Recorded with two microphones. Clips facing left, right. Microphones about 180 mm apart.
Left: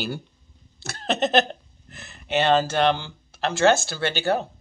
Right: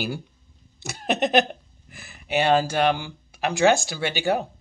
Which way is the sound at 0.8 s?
15° right (ahead or behind).